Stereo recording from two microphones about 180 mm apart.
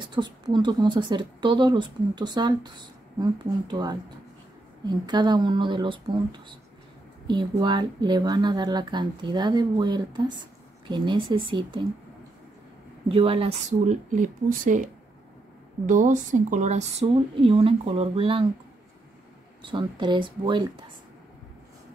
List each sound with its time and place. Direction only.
0.0 s a woman's voice: 25° right (ahead or behind)
7.2 s a woman's voice: 25° right (ahead or behind)
13.1 s a woman's voice: 30° right (ahead or behind); by 14.9 s 45° right (ahead or behind)
15.9 s speech: 45° right (ahead or behind); by 18.5 s 30° right (ahead or behind)
19.6 s a woman's voice: 25° right (ahead or behind)